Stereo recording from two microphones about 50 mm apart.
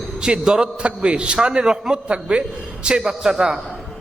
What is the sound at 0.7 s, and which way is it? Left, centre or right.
A man's voice, right.